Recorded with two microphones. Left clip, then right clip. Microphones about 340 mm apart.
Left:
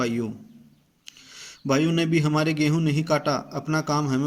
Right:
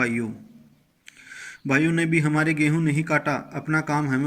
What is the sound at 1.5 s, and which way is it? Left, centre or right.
A man's voice, centre.